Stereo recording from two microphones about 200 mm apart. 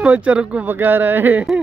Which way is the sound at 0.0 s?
5° right (ahead or behind).